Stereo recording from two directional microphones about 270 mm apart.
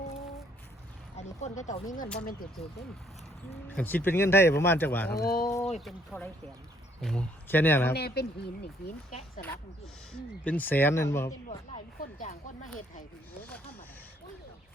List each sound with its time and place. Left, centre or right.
1.4 s speech: left
3.8 s speech: centre
5.2 s speech: left
5.8 s speech: centre
7.9 s speech: left
10.1 s speech: centre
11.9 s speech: left